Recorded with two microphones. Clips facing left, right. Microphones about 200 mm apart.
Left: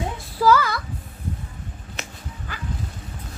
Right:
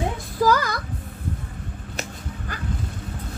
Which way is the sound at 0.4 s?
45° right (ahead or behind).